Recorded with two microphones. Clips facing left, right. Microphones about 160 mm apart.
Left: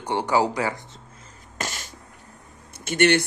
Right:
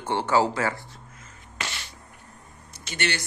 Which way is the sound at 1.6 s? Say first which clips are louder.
Left 3 dB; 45° left (ahead or behind).